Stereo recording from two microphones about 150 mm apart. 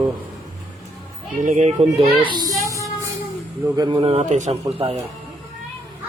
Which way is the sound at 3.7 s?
30° right (ahead or behind).